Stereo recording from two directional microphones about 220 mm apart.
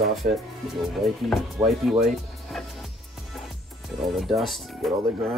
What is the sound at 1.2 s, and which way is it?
Speech, centre (ahead or behind).